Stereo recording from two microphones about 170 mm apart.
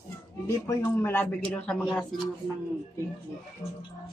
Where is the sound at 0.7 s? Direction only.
15° left (ahead or behind).